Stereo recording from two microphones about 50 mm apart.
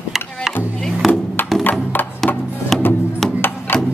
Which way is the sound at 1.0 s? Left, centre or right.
Centre.